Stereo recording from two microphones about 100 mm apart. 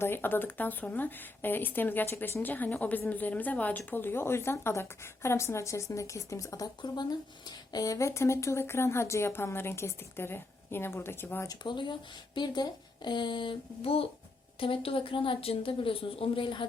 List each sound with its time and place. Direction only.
0.0 s speech: 20° left (ahead or behind)
11.4 s speech: 50° left (ahead or behind)